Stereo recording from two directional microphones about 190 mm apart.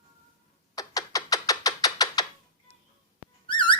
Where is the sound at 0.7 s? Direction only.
20° left (ahead or behind).